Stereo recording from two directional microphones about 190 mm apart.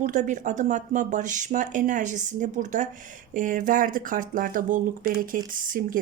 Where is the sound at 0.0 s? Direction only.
40° right (ahead or behind).